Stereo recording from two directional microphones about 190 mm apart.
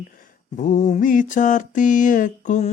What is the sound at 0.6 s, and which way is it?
Mantra, 40° left (ahead or behind).